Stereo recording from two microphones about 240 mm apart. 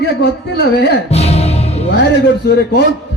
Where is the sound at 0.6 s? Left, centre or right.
Left.